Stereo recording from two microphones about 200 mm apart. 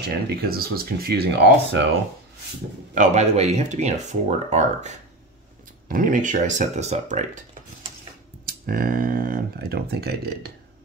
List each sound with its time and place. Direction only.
0.0 s speech: 50° right (ahead or behind)
2.9 s speech: 35° right (ahead or behind)
8.5 s speech: 45° right (ahead or behind)